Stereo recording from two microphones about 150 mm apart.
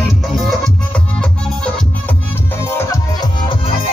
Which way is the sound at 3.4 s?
35° left (ahead or behind).